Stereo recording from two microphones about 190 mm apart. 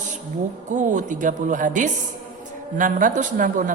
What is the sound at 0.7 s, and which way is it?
A woman's voice, 40° right (ahead or behind).